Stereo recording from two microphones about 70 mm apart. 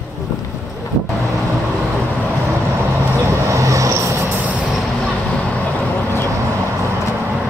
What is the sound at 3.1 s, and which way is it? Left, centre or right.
Vehicle, right.